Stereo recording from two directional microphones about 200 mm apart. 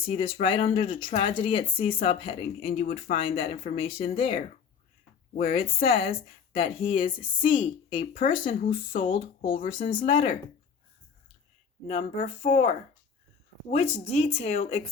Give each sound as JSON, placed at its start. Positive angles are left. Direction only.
{"t": 0.0, "sound": "speech", "side_deg": 25}
{"t": 5.3, "sound": "speech", "side_deg": 45}
{"t": 5.5, "sound": "speech", "side_deg": 30}
{"t": 8.0, "sound": "speech", "side_deg": 45}
{"t": 8.3, "sound": "speech", "side_deg": 25}
{"t": 9.7, "sound": "speech", "side_deg": 45}
{"t": 10.0, "sound": "speech", "side_deg": 25}
{"t": 11.9, "sound": "speech", "side_deg": 35}